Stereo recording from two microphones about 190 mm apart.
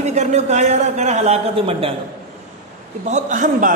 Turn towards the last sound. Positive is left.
turn(degrees=-40)  # may be behind; listen again after turning